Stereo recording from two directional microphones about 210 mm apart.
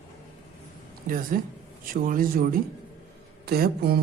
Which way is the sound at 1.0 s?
40° right (ahead or behind).